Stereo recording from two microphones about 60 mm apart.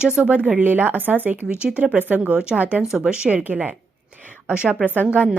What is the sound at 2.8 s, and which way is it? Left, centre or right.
Speech, centre.